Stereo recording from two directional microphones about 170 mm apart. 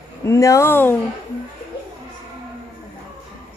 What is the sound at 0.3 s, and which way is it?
Speech, 20° left (ahead or behind).